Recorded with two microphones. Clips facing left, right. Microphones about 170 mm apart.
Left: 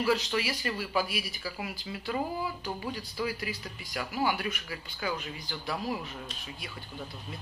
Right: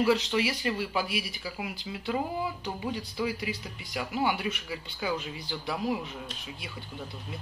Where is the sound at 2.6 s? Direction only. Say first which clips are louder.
Right 2 dB; 20° right (ahead or behind).